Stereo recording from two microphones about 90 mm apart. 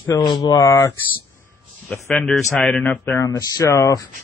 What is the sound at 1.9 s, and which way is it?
Speech, 15° left (ahead or behind).